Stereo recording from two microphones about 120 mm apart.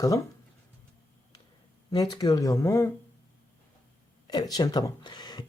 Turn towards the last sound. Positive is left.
turn(degrees=35)  # may be behind; listen again after turning